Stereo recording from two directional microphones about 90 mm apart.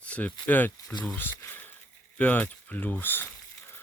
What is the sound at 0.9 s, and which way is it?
Speech, 5° left (ahead or behind).